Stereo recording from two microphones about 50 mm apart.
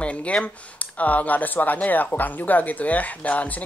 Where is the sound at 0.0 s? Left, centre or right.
Left.